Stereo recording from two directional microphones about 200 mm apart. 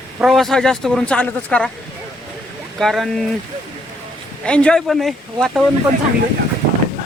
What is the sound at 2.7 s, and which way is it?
Speech, centre (ahead or behind).